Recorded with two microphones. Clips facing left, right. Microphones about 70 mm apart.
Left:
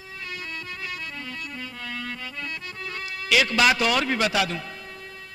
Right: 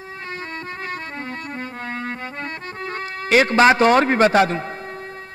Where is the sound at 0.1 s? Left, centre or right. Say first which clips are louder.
Right 4 dB; right.